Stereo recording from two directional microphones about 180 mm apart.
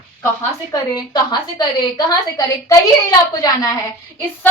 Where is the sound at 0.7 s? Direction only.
25° left (ahead or behind).